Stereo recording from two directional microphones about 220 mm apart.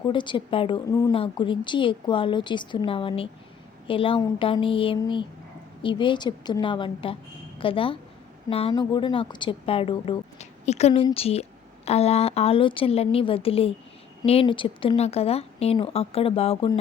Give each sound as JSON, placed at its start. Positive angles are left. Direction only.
{"t": 0.1, "sound": "a woman's voice", "side_deg": 20}